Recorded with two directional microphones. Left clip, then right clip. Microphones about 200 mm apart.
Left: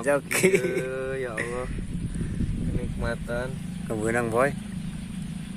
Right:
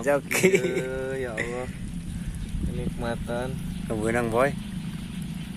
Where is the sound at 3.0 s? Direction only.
20° right (ahead or behind).